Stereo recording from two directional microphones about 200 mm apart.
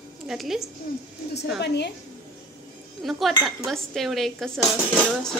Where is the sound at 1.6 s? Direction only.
60° left (ahead or behind).